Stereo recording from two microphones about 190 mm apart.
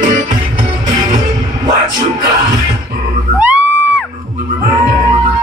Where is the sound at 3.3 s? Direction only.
10° right (ahead or behind).